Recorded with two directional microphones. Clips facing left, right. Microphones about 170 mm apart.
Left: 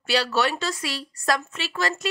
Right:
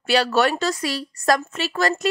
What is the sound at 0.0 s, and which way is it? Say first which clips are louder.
A woman's voice: right 4 dB; 50° right (ahead or behind).